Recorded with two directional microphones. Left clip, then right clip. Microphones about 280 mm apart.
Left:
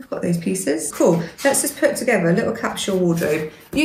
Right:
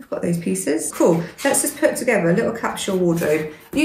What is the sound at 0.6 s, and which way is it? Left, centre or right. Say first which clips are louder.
Speech: even; centre.